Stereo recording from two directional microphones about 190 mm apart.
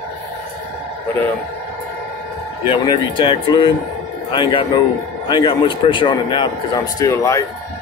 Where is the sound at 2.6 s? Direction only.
25° left (ahead or behind).